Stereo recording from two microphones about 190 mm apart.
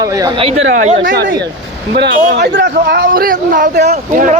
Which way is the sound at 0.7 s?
40° right (ahead or behind).